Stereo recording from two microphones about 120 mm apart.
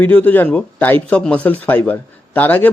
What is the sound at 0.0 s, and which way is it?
Speech, 15° left (ahead or behind).